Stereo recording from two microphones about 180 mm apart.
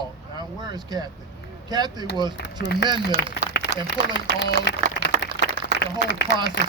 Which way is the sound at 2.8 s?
75° left (ahead or behind).